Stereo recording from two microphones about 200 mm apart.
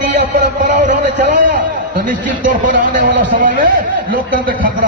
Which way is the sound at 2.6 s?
40° right (ahead or behind).